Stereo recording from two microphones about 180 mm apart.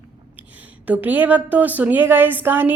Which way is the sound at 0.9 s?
10° right (ahead or behind).